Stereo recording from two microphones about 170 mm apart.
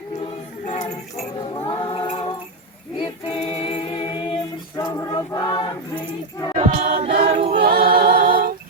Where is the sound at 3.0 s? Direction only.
30° left (ahead or behind).